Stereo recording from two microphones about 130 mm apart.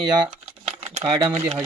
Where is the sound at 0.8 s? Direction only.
50° right (ahead or behind).